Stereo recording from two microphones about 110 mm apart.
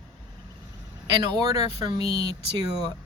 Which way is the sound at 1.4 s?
35° right (ahead or behind).